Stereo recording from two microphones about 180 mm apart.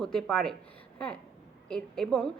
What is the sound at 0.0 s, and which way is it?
A woman's voice, 5° left (ahead or behind).